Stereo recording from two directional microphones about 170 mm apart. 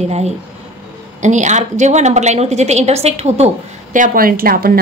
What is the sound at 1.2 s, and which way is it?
A woman's voice, 45° right (ahead or behind).